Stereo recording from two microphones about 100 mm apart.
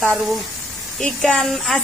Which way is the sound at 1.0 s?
5° left (ahead or behind).